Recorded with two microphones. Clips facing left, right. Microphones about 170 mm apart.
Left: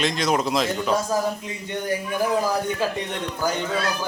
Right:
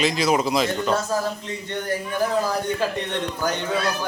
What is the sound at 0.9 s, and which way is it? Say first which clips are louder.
Speech: left 1 dB; 15° left (ahead or behind).